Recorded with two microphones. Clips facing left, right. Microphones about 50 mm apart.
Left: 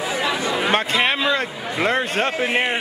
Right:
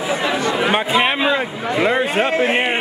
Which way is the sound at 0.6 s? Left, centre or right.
Centre.